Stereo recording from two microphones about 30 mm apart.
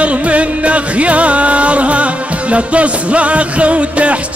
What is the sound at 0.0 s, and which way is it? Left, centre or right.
Music, right.